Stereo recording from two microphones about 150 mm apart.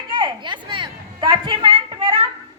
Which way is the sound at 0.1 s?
30° right (ahead or behind).